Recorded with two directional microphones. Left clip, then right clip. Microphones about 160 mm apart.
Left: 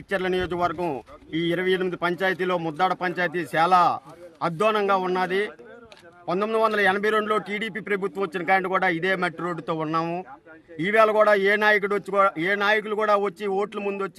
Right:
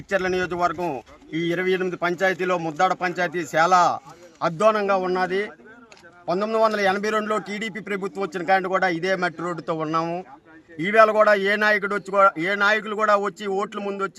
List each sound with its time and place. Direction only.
0.2 s a man's voice: 25° left (ahead or behind)
2.5 s a man's voice: 5° left (ahead or behind)